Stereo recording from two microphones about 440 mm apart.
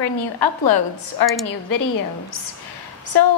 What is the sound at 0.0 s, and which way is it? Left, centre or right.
A woman's voice, left.